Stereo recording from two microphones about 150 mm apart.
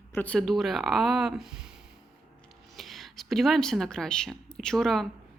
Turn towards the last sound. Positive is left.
turn(degrees=0)  # may be behind; listen again after turning